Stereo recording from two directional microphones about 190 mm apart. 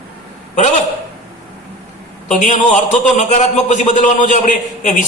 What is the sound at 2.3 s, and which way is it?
A man's voice, 40° left (ahead or behind).